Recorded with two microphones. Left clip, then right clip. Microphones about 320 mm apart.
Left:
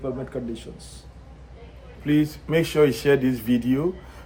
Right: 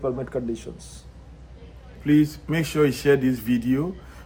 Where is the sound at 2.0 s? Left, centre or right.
Centre.